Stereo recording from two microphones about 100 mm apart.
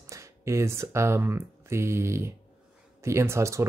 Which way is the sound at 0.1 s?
30° right (ahead or behind).